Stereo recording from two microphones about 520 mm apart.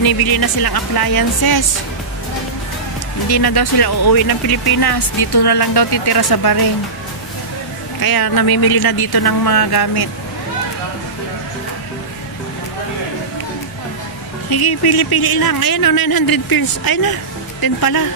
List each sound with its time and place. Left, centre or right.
0.0 s speech: left
3.3 s speech: left
8.0 s speech: left
14.5 s speech: left